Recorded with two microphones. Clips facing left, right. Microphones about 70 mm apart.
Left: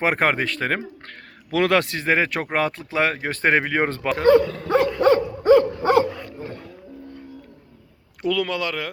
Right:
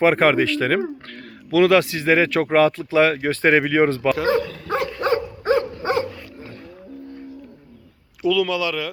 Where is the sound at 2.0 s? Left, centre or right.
Left.